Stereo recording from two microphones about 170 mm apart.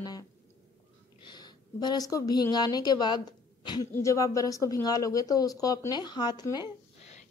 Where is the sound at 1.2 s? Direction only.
25° left (ahead or behind).